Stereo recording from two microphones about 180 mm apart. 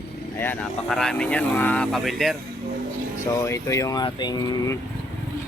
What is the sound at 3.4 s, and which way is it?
Speech, 15° left (ahead or behind).